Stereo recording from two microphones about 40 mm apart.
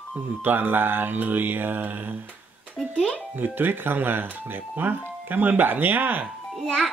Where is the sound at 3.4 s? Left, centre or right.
Right.